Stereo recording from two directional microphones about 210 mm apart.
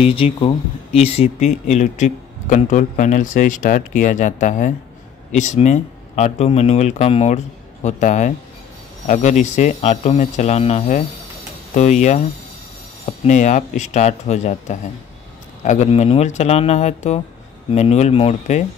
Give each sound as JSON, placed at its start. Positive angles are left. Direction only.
{"t": 0.0, "sound": "speech", "side_deg": 25}